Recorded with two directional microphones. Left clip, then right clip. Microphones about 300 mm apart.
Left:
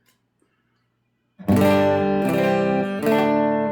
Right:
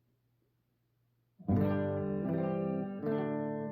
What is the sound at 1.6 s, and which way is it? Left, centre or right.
Music, left.